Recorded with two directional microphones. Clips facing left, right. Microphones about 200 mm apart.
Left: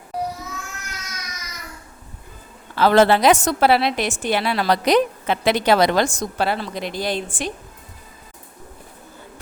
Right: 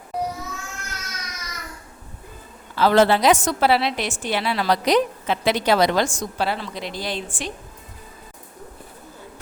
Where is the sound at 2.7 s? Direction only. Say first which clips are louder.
Left 2 dB; 60° left (ahead or behind).